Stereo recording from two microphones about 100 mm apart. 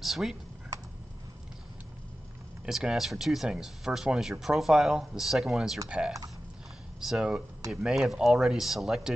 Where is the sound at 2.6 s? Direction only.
10° right (ahead or behind).